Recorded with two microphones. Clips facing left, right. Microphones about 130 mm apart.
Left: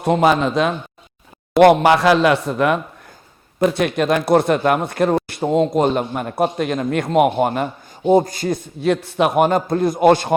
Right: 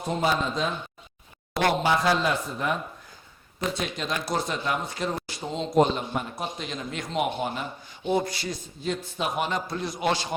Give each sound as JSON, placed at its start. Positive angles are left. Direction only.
{"t": 0.0, "sound": "speech", "side_deg": 70}
{"t": 8.0, "sound": "a man's voice", "side_deg": 45}
{"t": 8.8, "sound": "a man's voice", "side_deg": 70}